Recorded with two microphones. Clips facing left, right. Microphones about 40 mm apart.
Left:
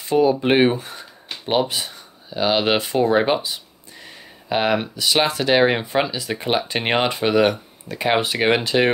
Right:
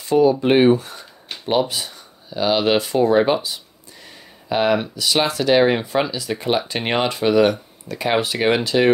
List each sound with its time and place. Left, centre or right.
0.0 s speech: left
4.5 s speech: left